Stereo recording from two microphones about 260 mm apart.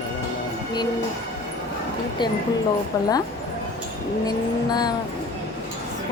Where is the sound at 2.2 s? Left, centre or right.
Centre.